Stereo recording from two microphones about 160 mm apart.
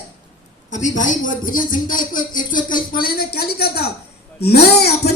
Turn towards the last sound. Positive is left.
turn(degrees=90)